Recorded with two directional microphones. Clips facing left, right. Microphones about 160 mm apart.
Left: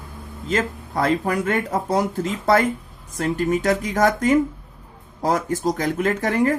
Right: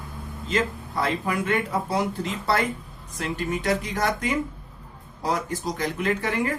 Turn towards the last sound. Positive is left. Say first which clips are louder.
# left 5 dB
turn(degrees=45)  # may be behind; listen again after turning